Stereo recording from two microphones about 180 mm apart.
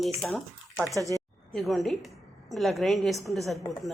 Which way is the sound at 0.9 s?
20° right (ahead or behind).